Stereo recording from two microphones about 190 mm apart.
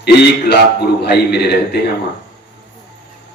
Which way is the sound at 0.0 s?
60° left (ahead or behind).